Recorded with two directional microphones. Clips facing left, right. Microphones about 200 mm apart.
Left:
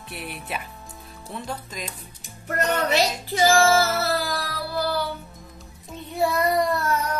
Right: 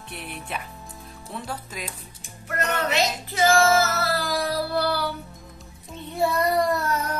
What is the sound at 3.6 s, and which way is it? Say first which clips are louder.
Music: left 1 dB; 30° left (ahead or behind).